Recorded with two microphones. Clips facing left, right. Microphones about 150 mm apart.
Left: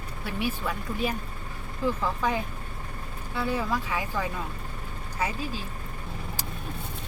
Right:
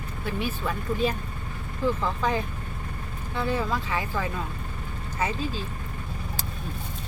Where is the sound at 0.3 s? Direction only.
10° left (ahead or behind).